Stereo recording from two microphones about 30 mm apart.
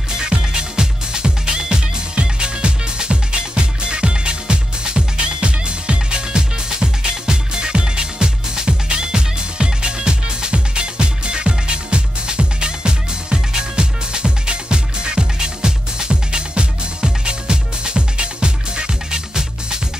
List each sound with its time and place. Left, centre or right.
0.2 s music: right